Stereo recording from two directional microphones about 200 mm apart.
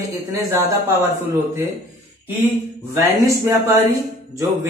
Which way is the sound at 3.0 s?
10° right (ahead or behind).